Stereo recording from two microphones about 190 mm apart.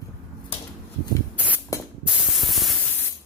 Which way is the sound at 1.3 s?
10° right (ahead or behind).